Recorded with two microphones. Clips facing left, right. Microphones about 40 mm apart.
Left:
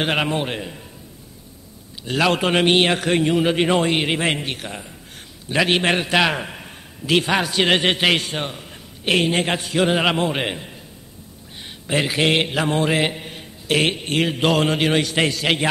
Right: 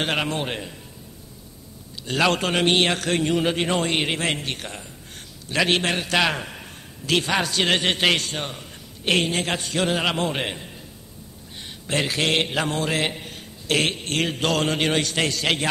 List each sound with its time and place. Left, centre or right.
0.0 s a man's voice: centre
2.0 s a man's voice: centre
2.4 s a man's voice: centre
4.2 s mantra: centre
4.6 s a man's voice: centre
5.9 s mantra: left
6.1 s a man's voice: centre
8.5 s a sound: centre
9.3 s mantra: left
9.6 s a man's voice: centre
12.6 s mantra: centre
13.7 s a man's voice: centre